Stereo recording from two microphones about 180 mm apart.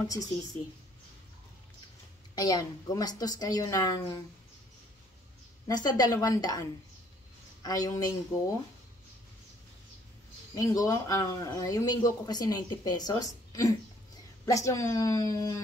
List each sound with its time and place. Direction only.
0.0 s a man's voice: 20° left (ahead or behind)
2.3 s a man's voice: 20° left (ahead or behind)
5.7 s a man's voice: 20° left (ahead or behind)
7.6 s a man's voice: 20° left (ahead or behind)
10.5 s a man's voice: 20° left (ahead or behind)